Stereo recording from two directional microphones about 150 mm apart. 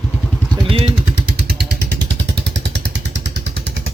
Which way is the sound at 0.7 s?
35° right (ahead or behind).